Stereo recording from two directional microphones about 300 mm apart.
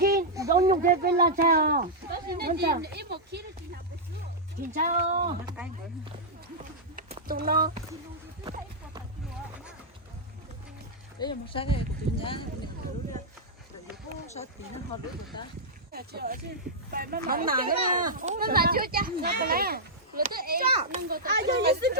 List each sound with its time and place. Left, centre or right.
0.3 s a sound: centre
1.0 s speech: right
4.7 s speech: right
6.9 s a sound: right
11.2 s speech: centre
15.9 s speech: right